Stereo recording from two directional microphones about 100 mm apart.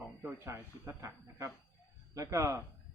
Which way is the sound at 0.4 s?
25° right (ahead or behind).